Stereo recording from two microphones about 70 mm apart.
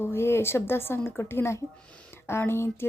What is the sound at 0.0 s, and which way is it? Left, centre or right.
Speech, left.